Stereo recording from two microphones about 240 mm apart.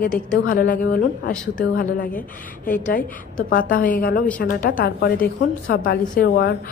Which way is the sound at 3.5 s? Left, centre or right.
Left.